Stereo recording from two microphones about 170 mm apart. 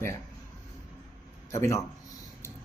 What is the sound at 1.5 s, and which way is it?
Speech, 15° left (ahead or behind).